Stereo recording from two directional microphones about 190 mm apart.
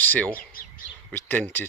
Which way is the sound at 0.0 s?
10° left (ahead or behind).